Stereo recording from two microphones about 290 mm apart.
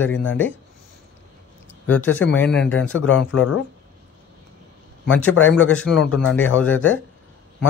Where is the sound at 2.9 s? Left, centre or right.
Left.